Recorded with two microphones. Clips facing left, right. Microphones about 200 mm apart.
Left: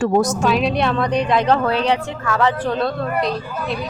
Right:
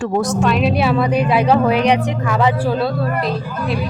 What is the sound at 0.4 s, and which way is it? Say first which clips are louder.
A woman's voice: right 2 dB; centre (ahead or behind).